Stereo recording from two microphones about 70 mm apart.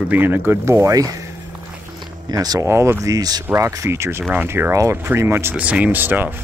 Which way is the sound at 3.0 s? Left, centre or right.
Right.